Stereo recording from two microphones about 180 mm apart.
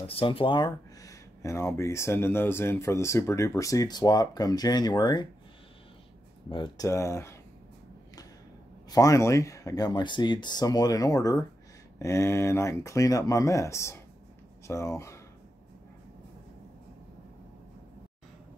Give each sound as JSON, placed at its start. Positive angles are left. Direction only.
{"t": 0.0, "sound": "speech", "side_deg": 30}
{"t": 6.5, "sound": "speech", "side_deg": 25}
{"t": 8.9, "sound": "speech", "side_deg": 20}